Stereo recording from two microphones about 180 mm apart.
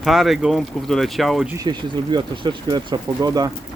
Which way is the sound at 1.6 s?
25° right (ahead or behind).